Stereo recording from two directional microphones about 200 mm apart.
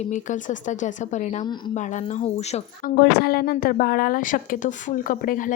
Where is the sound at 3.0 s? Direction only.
50° left (ahead or behind).